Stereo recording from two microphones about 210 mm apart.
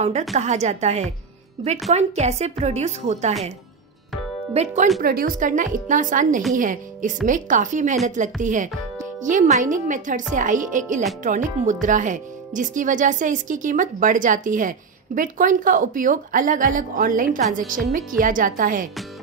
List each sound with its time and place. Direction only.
0.3 s speech: 30° right (ahead or behind)
4.6 s speech: 30° right (ahead or behind)
5.0 s speech: 45° right (ahead or behind)